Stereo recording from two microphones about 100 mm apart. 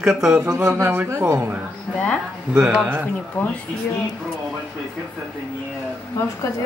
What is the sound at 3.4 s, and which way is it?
Speech, 15° left (ahead or behind).